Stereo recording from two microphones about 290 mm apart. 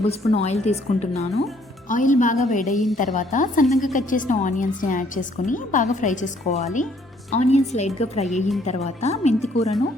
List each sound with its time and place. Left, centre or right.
0.0 s a woman's voice: left
3.7 s a woman's voice: centre
3.9 s a woman's voice: left